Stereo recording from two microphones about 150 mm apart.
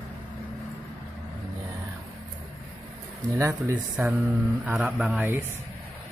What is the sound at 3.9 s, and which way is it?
Speech, 5° right (ahead or behind).